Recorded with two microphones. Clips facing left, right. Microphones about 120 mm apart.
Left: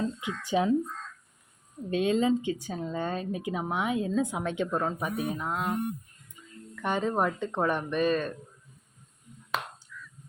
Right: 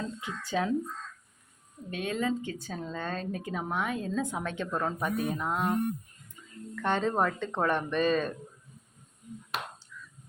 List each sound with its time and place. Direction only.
0.2 s speech: 15° left (ahead or behind)
1.9 s speech: 25° left (ahead or behind); by 5.7 s centre (ahead or behind)
6.8 s speech: 10° left (ahead or behind)
9.9 s a sound: 20° right (ahead or behind)